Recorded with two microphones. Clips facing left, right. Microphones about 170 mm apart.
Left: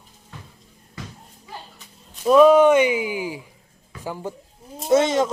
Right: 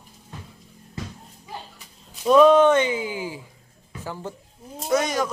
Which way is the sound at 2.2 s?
5° left (ahead or behind).